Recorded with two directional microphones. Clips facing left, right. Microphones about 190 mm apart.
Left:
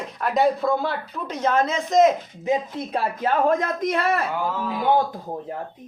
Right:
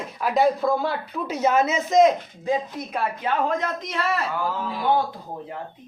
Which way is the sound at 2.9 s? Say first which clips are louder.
Left 3 dB; 35° left (ahead or behind).